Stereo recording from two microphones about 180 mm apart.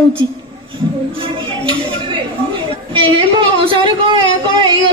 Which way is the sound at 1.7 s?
25° right (ahead or behind).